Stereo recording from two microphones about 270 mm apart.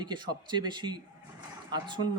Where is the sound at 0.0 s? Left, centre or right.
Centre.